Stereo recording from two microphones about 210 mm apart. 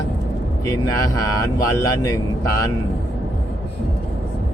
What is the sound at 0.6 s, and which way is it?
Speech, 15° left (ahead or behind).